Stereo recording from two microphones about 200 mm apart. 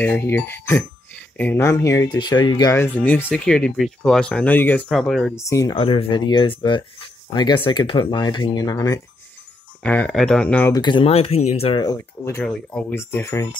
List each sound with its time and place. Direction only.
0.0 s speech: 10° left (ahead or behind)
5.3 s speech: 15° left (ahead or behind)
9.8 s speech: 5° left (ahead or behind)
10.7 s speech: 20° left (ahead or behind)